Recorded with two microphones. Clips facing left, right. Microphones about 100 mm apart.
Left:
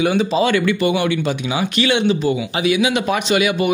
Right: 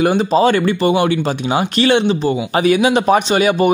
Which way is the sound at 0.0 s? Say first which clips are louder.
Right 4 dB; 40° right (ahead or behind).